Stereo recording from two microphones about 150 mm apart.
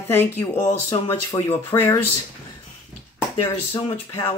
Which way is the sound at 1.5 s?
15° left (ahead or behind).